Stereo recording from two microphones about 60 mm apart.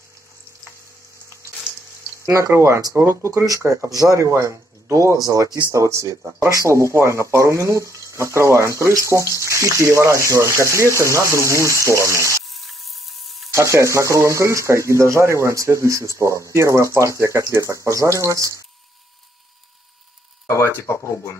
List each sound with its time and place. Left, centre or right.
2.2 s speech: right
3.4 s speech: right
12.4 s a sound: centre
13.5 s speech: right
20.6 s speech: left